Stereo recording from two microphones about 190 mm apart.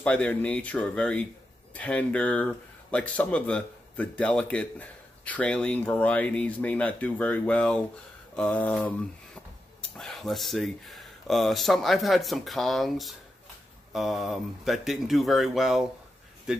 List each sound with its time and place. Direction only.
0.0 s speech: 5° left (ahead or behind)